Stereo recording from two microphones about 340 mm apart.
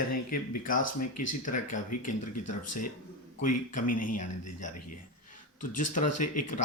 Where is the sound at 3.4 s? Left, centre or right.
Left.